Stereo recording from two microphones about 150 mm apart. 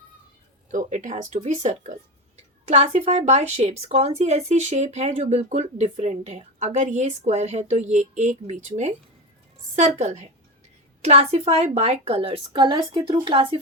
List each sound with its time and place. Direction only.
0.7 s a woman's voice: 55° right (ahead or behind); by 13.6 s 35° right (ahead or behind)